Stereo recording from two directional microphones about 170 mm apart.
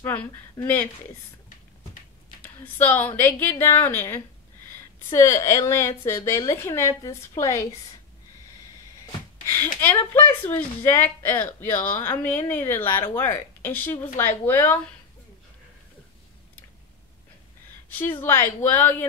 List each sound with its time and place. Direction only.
2.4 s speech: 10° left (ahead or behind)
9.5 s speech: 10° left (ahead or behind)
17.8 s a woman's voice: 10° left (ahead or behind)